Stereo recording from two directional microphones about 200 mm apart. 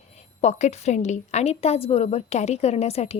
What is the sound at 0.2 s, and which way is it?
A woman's voice, 35° left (ahead or behind).